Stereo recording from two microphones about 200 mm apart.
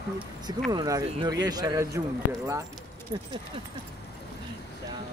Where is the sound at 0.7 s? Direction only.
20° right (ahead or behind).